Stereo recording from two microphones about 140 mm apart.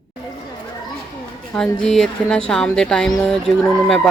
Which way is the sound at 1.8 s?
5° left (ahead or behind).